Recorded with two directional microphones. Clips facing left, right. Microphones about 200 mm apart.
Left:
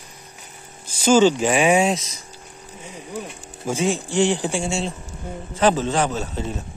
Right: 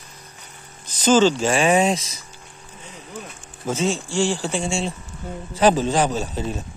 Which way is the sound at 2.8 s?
10° left (ahead or behind).